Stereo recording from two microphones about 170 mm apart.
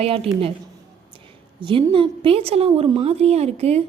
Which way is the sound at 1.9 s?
30° right (ahead or behind).